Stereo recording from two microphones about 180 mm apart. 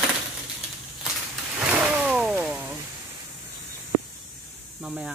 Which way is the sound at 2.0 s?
5° right (ahead or behind).